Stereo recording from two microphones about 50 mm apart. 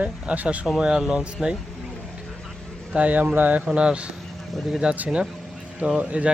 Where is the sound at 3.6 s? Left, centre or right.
Right.